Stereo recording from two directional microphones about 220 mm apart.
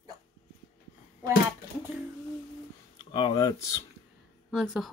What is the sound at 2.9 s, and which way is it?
Speech, 20° left (ahead or behind).